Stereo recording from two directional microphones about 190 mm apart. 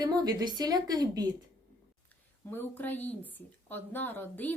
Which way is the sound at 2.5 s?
10° left (ahead or behind).